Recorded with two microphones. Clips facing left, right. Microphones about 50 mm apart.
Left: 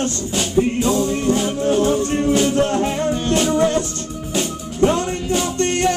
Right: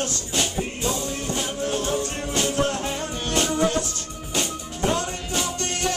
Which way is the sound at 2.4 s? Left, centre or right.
Left.